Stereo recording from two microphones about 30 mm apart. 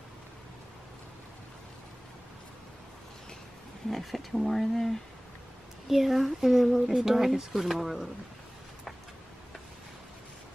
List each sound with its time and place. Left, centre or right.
3.9 s speech: centre
5.9 s speech: centre
7.5 s speech: centre